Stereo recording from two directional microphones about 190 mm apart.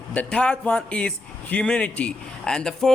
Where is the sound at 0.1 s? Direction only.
5° left (ahead or behind).